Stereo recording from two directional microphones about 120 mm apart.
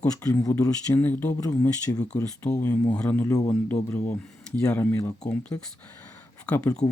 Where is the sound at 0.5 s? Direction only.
20° left (ahead or behind).